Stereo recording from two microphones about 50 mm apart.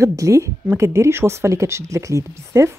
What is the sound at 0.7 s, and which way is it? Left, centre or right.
Speech, right.